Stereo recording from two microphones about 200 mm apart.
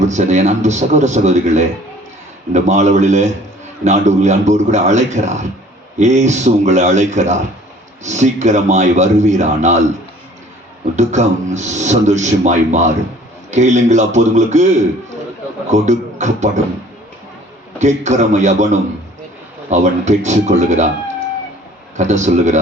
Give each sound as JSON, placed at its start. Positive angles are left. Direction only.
{"t": 0.0, "sound": "a man's voice", "side_deg": -35}
{"t": 10.9, "sound": "a man's voice", "side_deg": -35}
{"t": 17.7, "sound": "a man's voice", "side_deg": -35}
{"t": 21.9, "sound": "a man's voice", "side_deg": -35}